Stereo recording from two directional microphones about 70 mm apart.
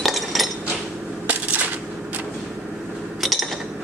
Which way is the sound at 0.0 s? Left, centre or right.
Centre.